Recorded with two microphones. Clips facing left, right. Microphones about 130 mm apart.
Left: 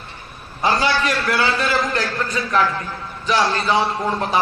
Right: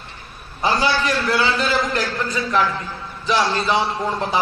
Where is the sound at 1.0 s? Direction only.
25° right (ahead or behind).